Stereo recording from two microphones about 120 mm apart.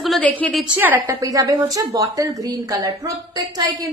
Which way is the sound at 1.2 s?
30° right (ahead or behind).